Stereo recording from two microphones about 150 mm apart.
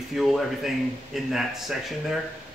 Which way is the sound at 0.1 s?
Centre (ahead or behind).